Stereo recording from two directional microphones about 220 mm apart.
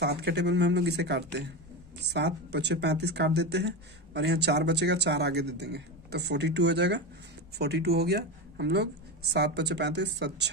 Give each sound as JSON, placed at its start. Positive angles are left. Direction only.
{"t": 0.0, "sound": "speech", "side_deg": -50}